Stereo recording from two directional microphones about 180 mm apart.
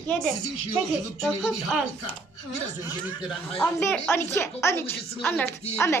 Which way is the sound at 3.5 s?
15° left (ahead or behind).